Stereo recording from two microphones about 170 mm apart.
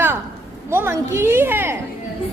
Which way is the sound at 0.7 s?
15° right (ahead or behind).